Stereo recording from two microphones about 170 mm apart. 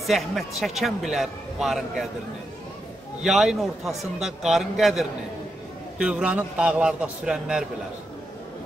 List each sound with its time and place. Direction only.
0.0 s a man's voice: centre (ahead or behind)
3.2 s a man's voice: 5° right (ahead or behind)